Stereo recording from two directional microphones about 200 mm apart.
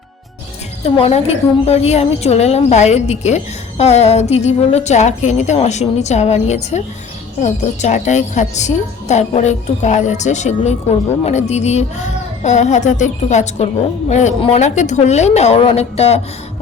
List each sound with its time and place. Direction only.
0.9 s a woman's voice: 30° left (ahead or behind)